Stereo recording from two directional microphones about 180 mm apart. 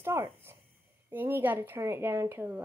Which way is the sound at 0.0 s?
15° right (ahead or behind).